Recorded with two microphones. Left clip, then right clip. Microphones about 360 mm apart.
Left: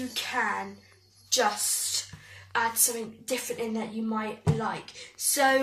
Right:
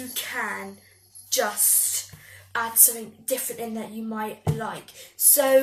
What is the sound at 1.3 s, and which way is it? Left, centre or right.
Speech, centre.